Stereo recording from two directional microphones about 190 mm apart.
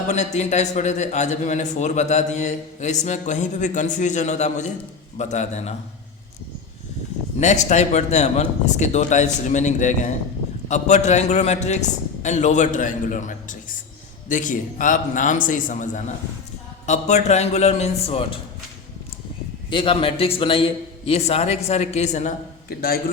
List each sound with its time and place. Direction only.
0.1 s a man's voice: 35° left (ahead or behind)
7.3 s a man's voice: 40° left (ahead or behind)
19.7 s a man's voice: 25° left (ahead or behind)
22.7 s a man's voice: 50° left (ahead or behind)